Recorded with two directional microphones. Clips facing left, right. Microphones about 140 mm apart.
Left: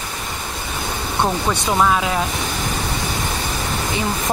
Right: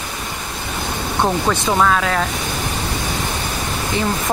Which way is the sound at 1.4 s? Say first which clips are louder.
Even; 10° left (ahead or behind).